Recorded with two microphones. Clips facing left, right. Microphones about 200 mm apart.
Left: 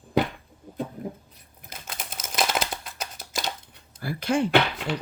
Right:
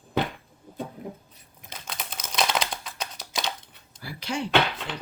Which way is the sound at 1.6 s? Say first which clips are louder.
Right 1 dB; 5° left (ahead or behind).